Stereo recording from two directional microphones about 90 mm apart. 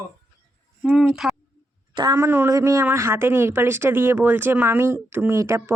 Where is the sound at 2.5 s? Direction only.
40° right (ahead or behind).